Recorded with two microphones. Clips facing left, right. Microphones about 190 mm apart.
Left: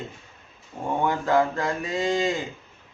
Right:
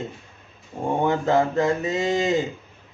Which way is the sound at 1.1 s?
25° right (ahead or behind).